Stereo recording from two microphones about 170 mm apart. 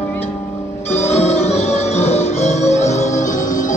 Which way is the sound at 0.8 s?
40° left (ahead or behind).